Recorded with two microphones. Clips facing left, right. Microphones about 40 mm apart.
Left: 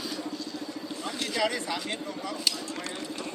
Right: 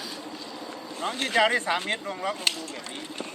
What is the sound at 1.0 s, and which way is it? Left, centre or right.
Speech, right.